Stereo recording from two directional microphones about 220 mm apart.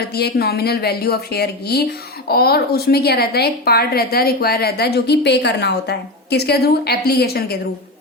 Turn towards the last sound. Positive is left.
turn(degrees=45)  # may be behind; listen again after turning